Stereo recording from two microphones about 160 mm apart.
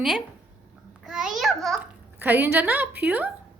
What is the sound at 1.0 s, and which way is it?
Babbling, 5° right (ahead or behind).